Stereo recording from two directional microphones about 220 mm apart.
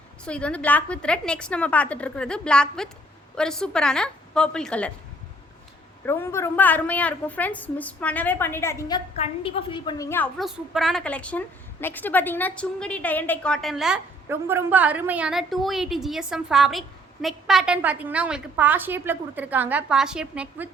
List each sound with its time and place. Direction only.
0.3 s a woman's voice: 5° left (ahead or behind)
6.1 s a woman's voice: 10° left (ahead or behind)
9.1 s a woman's voice: 25° left (ahead or behind)
10.3 s a woman's voice: centre (ahead or behind)